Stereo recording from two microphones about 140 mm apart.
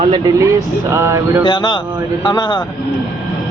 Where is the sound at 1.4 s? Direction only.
35° left (ahead or behind).